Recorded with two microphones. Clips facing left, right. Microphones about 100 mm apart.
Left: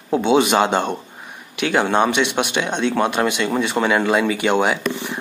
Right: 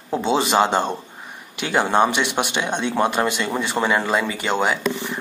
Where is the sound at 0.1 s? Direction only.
5° left (ahead or behind).